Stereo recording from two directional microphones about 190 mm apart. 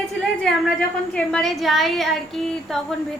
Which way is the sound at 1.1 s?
5° left (ahead or behind).